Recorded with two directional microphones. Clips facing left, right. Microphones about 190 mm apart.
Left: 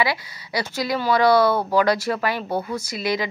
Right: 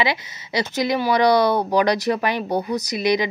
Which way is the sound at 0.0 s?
20° right (ahead or behind).